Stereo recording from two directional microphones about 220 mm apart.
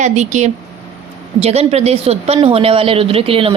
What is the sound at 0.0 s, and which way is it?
A woman's voice, 35° right (ahead or behind).